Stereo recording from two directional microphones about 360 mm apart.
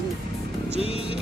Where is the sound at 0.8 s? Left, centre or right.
Centre.